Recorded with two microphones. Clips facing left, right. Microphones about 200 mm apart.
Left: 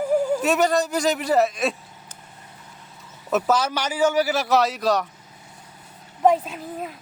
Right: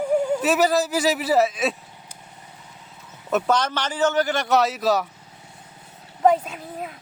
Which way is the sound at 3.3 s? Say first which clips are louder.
Even; 5° left (ahead or behind).